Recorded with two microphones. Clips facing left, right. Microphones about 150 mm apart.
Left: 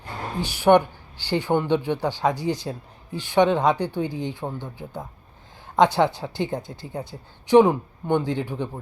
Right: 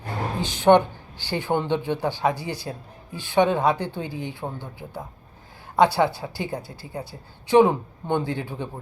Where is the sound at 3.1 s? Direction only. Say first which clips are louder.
Left 1 dB; 15° left (ahead or behind).